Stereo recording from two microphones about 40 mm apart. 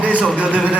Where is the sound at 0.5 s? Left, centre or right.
Right.